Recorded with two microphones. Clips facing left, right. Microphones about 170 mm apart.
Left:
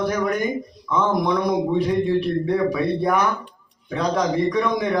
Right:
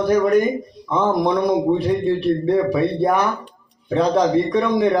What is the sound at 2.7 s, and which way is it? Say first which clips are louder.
A man's voice: right 3 dB; 30° right (ahead or behind).